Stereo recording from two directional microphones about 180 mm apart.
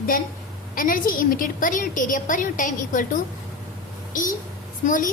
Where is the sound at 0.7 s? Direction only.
50° left (ahead or behind).